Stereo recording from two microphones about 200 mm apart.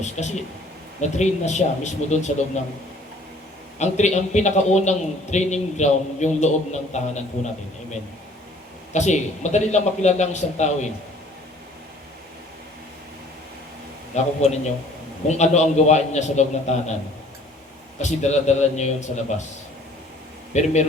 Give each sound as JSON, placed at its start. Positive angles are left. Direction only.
{"t": 0.0, "sound": "a man's voice", "side_deg": 35}
{"t": 3.8, "sound": "a man's voice", "side_deg": 35}
{"t": 8.9, "sound": "a man's voice", "side_deg": 35}
{"t": 14.4, "sound": "a man's voice", "side_deg": 35}
{"t": 18.0, "sound": "a man's voice", "side_deg": 35}
{"t": 20.5, "sound": "a man's voice", "side_deg": 35}